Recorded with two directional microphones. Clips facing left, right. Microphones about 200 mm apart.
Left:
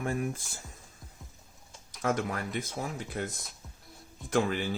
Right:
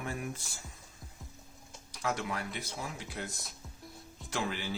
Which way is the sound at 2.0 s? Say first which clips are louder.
Left 5 dB; 50° left (ahead or behind).